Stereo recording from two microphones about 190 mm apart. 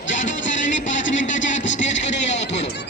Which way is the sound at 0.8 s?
40° left (ahead or behind).